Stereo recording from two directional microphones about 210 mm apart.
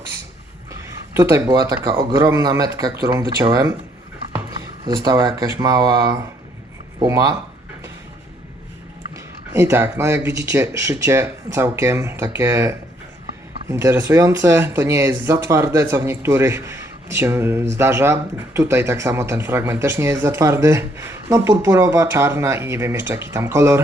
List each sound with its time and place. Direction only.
0.7 s speech: 15° right (ahead or behind)
4.9 s speech: 20° right (ahead or behind)
9.1 s speech: 10° right (ahead or behind)